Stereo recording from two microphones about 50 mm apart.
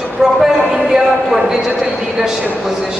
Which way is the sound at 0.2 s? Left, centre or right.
Centre.